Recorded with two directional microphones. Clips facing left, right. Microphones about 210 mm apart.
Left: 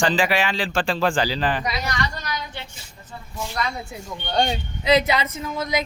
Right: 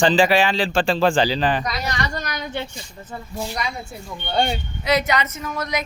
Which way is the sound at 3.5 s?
15° right (ahead or behind).